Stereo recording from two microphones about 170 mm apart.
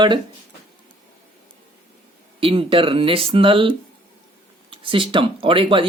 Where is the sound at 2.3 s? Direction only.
30° right (ahead or behind).